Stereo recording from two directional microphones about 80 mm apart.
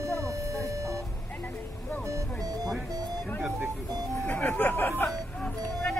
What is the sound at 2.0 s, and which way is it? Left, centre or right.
Music, right.